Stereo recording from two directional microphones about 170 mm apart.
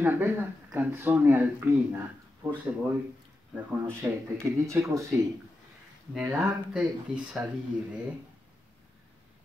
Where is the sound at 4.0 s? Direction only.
15° right (ahead or behind).